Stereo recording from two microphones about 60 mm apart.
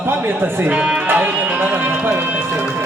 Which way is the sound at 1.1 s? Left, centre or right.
Right.